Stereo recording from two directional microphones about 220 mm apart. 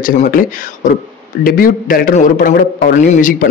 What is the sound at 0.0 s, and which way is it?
Speech, 40° left (ahead or behind).